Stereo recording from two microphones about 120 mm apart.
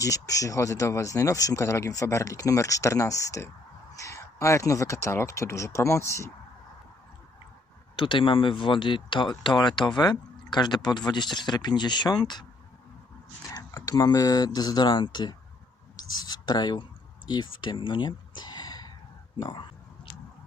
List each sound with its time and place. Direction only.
0.0 s speech: 30° left (ahead or behind)
7.9 s speech: 45° left (ahead or behind)
13.5 s speech: 30° left (ahead or behind)